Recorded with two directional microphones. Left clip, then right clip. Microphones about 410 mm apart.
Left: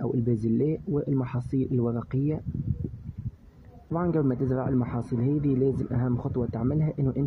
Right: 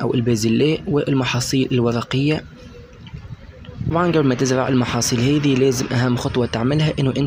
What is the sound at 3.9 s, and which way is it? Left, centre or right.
Speech, left.